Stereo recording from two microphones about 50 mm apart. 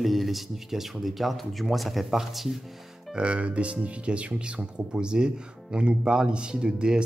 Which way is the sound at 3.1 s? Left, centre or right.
Right.